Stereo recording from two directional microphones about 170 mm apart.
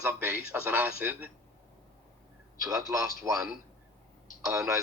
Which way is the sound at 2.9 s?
20° right (ahead or behind).